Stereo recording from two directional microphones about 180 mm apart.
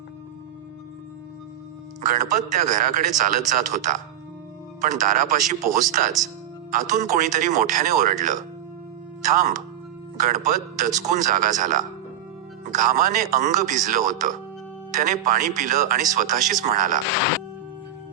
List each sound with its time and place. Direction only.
2.6 s a man's voice: 45° right (ahead or behind)